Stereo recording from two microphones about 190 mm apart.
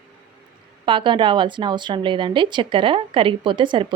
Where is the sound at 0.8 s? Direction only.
25° right (ahead or behind).